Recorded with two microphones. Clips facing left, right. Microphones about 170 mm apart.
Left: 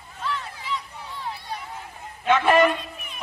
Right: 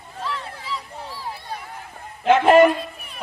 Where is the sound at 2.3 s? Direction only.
55° right (ahead or behind).